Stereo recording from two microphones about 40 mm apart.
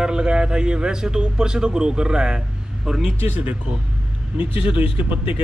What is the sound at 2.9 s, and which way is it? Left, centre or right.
Speech, centre.